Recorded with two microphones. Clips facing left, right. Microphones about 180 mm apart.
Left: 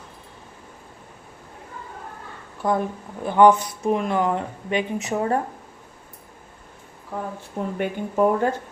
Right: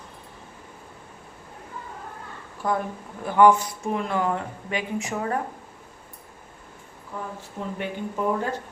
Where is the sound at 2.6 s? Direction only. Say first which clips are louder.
Left 3 dB; 20° left (ahead or behind).